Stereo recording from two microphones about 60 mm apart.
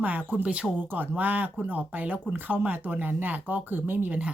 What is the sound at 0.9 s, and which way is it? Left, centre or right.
Speech, right.